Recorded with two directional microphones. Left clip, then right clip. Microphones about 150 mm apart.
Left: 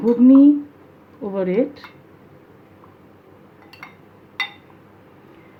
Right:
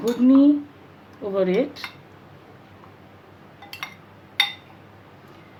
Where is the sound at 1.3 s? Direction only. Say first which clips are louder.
Left 1 dB; 50° left (ahead or behind).